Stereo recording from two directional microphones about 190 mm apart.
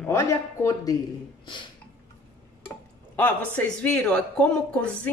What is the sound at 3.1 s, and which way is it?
Speech, 10° left (ahead or behind).